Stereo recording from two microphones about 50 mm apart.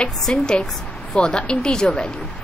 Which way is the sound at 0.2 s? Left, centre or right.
Centre.